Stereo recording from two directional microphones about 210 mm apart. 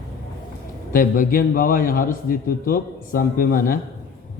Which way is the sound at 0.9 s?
40° left (ahead or behind).